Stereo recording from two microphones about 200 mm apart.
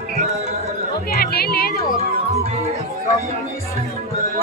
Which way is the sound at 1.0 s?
50° left (ahead or behind).